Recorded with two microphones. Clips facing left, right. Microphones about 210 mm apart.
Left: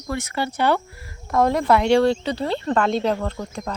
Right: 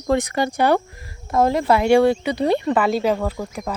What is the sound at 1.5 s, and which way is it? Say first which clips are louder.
Speech: even; centre (ahead or behind).